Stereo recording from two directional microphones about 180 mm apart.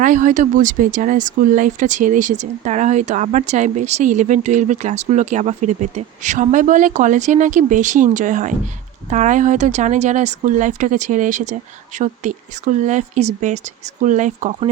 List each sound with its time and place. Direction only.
0.0 s speech: 45° right (ahead or behind)